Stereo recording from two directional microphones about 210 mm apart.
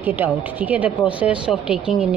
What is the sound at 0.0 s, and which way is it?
A woman's voice, 10° right (ahead or behind).